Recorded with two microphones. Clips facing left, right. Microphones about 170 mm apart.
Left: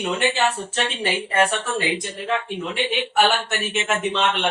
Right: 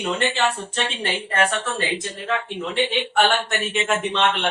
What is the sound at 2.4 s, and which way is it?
Speech, 5° left (ahead or behind).